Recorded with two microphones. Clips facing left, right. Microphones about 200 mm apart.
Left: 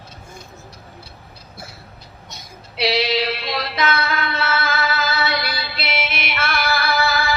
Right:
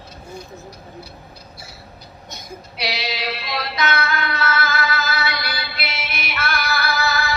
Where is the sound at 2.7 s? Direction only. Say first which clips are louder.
Left 8 dB; 25° left (ahead or behind).